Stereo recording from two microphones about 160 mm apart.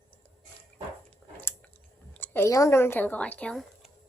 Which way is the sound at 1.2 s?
Centre (ahead or behind).